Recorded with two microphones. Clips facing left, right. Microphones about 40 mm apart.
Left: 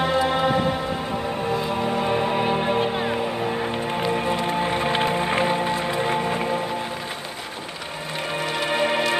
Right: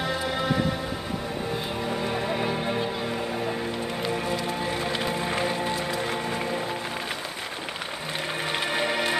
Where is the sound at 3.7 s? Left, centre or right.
Left; by 6.7 s centre.